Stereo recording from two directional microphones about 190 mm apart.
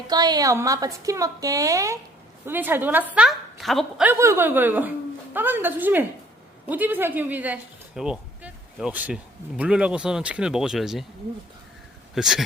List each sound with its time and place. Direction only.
0.1 s speech: 20° right (ahead or behind); by 11.0 s centre (ahead or behind)
12.1 s speech: centre (ahead or behind)